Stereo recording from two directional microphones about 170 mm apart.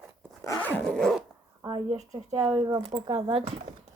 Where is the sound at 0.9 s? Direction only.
5° left (ahead or behind).